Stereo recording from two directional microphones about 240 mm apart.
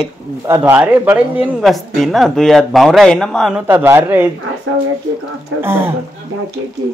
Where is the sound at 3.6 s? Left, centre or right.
Centre.